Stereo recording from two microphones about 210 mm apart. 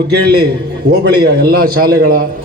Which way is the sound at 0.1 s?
50° right (ahead or behind).